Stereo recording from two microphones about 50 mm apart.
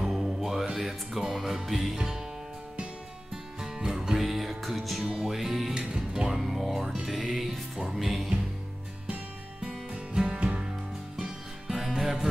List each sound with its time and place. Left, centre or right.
0.0 s music: centre
3.6 s music: centre
5.8 s music: centre
6.3 s music: centre
9.6 s music: centre
11.7 s music: centre